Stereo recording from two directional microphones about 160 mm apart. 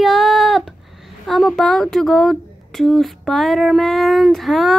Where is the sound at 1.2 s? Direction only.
Centre (ahead or behind).